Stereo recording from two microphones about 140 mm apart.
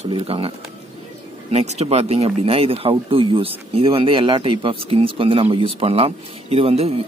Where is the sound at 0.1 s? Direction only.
40° right (ahead or behind).